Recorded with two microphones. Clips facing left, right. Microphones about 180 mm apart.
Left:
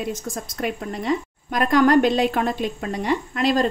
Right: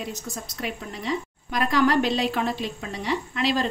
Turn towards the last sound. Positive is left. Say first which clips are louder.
# left 4 dB
turn(degrees=45)  # may be behind; listen again after turning